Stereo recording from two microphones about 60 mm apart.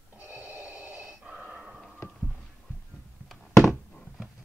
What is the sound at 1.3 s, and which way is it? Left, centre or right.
Breathing, right.